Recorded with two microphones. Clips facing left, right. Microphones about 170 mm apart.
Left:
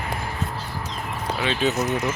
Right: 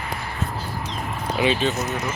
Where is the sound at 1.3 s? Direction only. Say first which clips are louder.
Right 6 dB; 15° right (ahead or behind).